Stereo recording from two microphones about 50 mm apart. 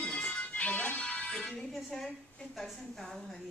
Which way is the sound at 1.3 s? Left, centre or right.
Centre.